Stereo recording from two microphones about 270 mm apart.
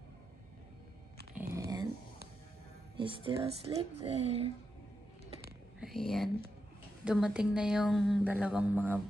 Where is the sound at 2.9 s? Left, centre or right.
Centre.